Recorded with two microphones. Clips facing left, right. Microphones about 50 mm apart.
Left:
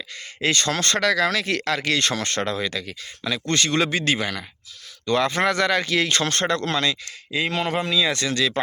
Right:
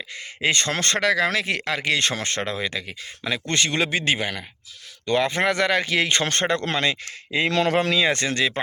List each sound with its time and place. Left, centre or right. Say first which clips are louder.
0.5 s speech: left 2 dB; right
7.3 s speech: right 3 dB; right
7.9 s speech: right 1 dB; right